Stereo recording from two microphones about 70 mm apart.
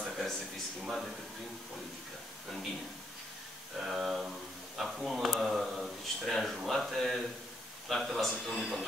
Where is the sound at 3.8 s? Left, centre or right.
Centre.